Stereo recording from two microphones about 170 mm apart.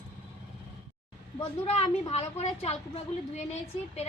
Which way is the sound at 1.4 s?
35° left (ahead or behind).